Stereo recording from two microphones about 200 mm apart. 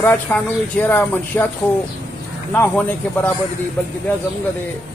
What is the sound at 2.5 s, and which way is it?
Speech, 10° left (ahead or behind).